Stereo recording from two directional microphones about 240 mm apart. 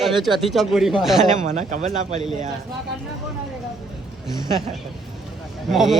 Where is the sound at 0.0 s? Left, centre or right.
Centre.